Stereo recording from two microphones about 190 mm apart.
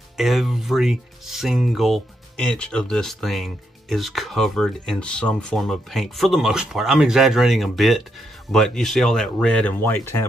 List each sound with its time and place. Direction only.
0.2 s speech: centre (ahead or behind)